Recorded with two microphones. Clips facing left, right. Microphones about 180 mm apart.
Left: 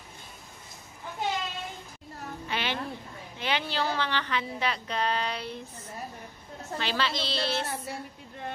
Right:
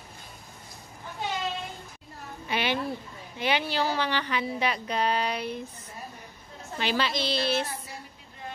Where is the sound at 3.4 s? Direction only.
10° right (ahead or behind).